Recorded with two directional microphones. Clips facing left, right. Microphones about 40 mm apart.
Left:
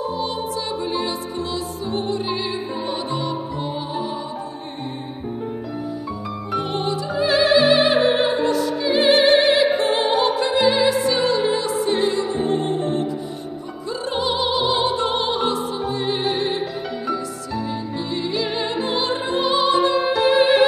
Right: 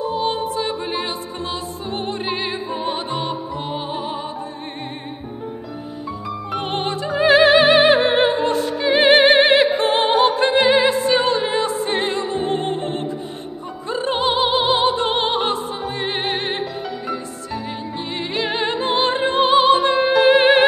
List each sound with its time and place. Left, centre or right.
0.1 s music: right
6.6 s music: right